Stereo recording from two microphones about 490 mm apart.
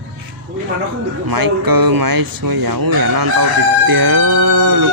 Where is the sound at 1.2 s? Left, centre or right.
Right.